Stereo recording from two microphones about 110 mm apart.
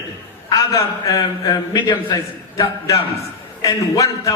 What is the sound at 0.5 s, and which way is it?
A man's voice, 35° left (ahead or behind).